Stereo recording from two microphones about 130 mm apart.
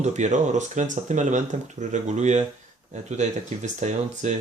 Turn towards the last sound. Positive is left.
turn(degrees=-65)  # may be behind; listen again after turning